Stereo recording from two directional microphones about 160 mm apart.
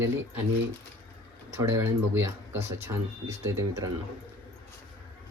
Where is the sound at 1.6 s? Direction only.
15° right (ahead or behind).